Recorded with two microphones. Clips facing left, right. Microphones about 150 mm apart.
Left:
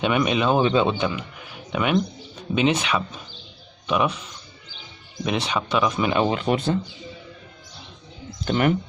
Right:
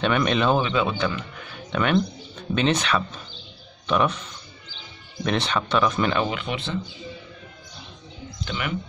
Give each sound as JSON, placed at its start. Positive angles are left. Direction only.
{"t": 0.0, "sound": "speech", "side_deg": 10}
{"t": 0.6, "sound": "speech", "side_deg": 30}
{"t": 0.9, "sound": "speech", "side_deg": 15}
{"t": 6.2, "sound": "speech", "side_deg": 35}
{"t": 8.5, "sound": "speech", "side_deg": 45}